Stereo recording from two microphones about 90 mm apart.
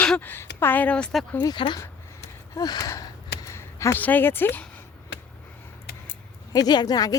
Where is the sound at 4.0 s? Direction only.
20° left (ahead or behind).